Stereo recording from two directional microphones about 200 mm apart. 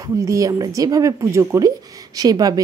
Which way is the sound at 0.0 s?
15° right (ahead or behind).